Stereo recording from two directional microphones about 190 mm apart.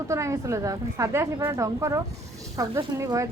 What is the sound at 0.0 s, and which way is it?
A woman's voice, 15° right (ahead or behind).